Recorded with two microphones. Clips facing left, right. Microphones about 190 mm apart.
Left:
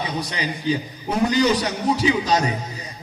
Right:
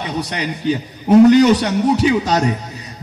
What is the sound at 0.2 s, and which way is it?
A man's voice, 70° right (ahead or behind).